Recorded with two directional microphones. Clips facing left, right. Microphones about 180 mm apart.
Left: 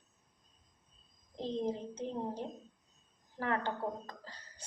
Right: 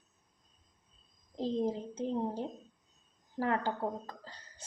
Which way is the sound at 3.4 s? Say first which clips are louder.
Right 3 dB; 30° right (ahead or behind).